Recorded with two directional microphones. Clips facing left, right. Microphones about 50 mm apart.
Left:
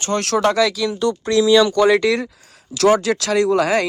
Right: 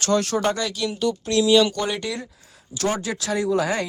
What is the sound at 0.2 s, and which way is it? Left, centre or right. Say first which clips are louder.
Speech: left 5 dB; left.